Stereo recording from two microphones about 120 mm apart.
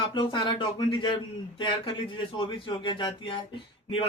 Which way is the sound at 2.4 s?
45° left (ahead or behind).